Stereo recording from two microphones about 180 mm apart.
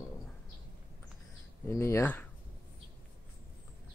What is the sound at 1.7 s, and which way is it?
Speech, 15° left (ahead or behind).